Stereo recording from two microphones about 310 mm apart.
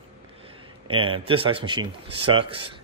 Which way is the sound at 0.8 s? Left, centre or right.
Centre.